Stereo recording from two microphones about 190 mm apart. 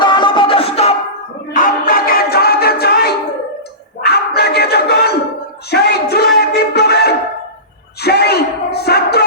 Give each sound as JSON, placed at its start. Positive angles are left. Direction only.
{"t": 0.0, "sound": "music", "side_deg": 25}
{"t": 1.5, "sound": "music", "side_deg": 45}
{"t": 8.0, "sound": "a sound", "side_deg": 60}